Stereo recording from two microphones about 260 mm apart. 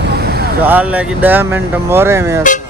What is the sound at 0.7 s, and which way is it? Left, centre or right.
Speech, centre.